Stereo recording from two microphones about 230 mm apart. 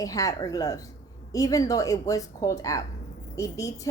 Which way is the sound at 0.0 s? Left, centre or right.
Centre.